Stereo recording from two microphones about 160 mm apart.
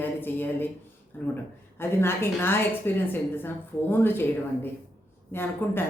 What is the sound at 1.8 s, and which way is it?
Speech, 15° left (ahead or behind).